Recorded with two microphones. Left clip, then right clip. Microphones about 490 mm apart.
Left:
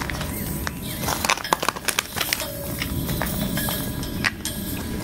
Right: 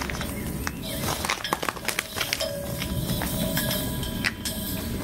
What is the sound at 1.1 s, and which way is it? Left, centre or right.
Horse, left.